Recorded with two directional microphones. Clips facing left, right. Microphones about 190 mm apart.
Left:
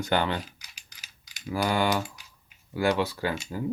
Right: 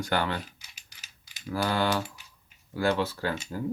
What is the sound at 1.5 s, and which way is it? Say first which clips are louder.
Speech: left 1 dB; 15° left (ahead or behind).